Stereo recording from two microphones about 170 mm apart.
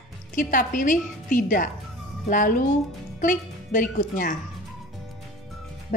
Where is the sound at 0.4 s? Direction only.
50° left (ahead or behind).